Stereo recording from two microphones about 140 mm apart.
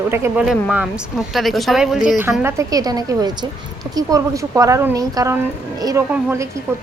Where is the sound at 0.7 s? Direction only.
5° right (ahead or behind).